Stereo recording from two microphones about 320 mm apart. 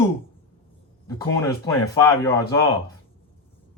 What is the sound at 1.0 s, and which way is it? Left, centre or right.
Speech, centre.